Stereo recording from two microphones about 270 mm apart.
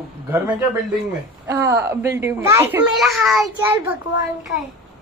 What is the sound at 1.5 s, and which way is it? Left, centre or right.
A child's voice, centre.